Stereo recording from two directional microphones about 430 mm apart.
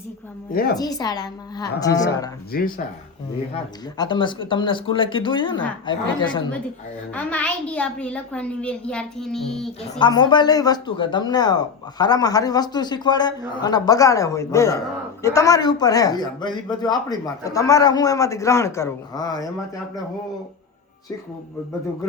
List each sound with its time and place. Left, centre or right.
0.5 s speech: left
0.8 s speech: centre
2.5 s a woman's voice: centre